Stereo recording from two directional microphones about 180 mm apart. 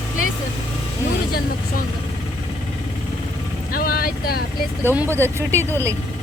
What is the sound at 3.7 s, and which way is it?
Vehicle, 55° left (ahead or behind).